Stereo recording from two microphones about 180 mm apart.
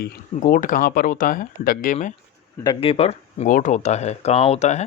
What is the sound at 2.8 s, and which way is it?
Speech, 30° left (ahead or behind).